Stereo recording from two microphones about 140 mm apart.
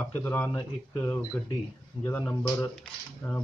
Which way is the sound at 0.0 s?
15° left (ahead or behind).